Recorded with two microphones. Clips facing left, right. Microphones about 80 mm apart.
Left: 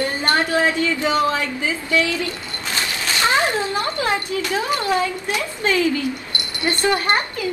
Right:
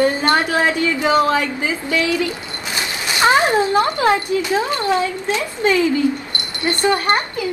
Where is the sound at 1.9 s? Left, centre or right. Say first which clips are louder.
Even; right.